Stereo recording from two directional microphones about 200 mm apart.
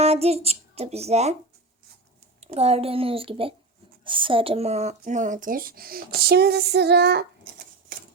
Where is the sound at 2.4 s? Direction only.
30° right (ahead or behind); by 7.6 s 55° right (ahead or behind).